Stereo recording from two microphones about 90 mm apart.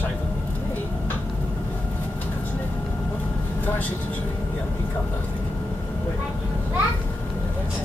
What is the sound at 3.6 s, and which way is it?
Speech, 20° left (ahead or behind).